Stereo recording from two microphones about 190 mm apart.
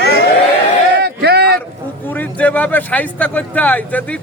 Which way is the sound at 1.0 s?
60° right (ahead or behind).